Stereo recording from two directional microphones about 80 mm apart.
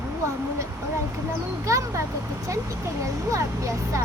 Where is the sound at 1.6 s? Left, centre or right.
Right.